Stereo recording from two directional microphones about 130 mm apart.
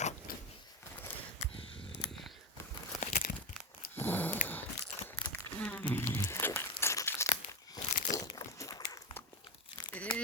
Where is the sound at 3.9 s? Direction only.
15° left (ahead or behind).